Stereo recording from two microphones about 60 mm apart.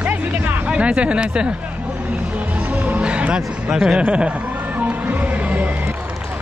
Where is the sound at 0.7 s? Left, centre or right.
Centre.